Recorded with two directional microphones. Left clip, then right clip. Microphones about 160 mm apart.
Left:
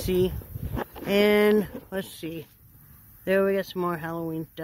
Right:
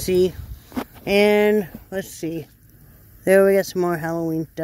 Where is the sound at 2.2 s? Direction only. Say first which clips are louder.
Right 8 dB; 20° right (ahead or behind).